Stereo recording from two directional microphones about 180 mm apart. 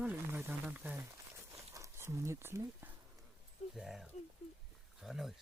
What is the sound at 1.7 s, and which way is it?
Speech, 15° right (ahead or behind).